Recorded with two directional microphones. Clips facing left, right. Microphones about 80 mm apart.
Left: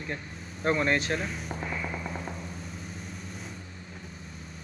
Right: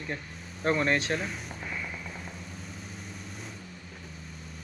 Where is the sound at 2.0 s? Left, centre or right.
Left.